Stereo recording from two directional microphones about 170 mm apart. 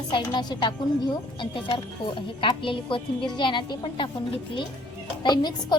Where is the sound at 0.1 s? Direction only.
25° left (ahead or behind).